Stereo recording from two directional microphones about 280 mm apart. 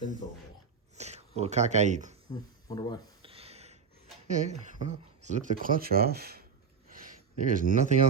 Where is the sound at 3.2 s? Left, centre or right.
Right.